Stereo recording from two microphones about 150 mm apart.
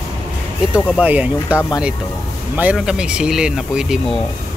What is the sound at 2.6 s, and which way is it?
Speech, 5° right (ahead or behind).